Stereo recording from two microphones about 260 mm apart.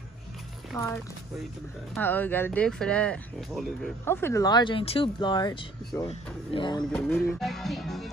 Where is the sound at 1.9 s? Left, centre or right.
Centre.